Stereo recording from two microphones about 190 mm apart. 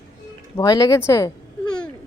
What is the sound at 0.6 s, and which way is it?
Speech, 20° left (ahead or behind).